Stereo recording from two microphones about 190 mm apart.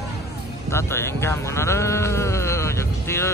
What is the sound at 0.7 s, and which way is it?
Speech, 15° left (ahead or behind).